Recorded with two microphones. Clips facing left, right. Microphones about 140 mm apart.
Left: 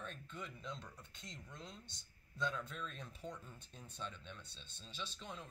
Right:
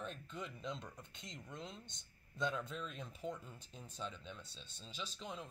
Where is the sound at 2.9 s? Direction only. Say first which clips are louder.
Right 4 dB; 10° right (ahead or behind).